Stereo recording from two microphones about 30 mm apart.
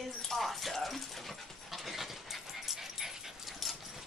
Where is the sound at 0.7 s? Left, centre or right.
Centre.